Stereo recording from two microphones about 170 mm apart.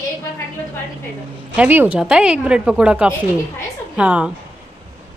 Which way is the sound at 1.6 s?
10° right (ahead or behind).